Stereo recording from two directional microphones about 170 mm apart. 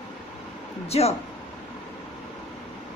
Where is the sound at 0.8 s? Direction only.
35° left (ahead or behind).